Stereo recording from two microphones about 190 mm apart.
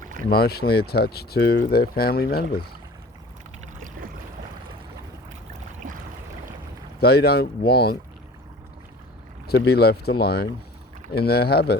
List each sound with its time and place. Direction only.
0.0 s boat: 45° right (ahead or behind)
0.3 s speech: 55° left (ahead or behind)
5.8 s a sound: 45° right (ahead or behind)
7.0 s speech: 55° left (ahead or behind)
9.5 s speech: 60° left (ahead or behind)